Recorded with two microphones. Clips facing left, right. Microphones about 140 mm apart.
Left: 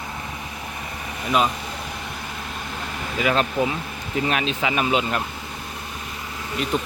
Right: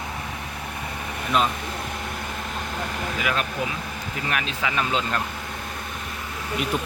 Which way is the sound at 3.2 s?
30° left (ahead or behind).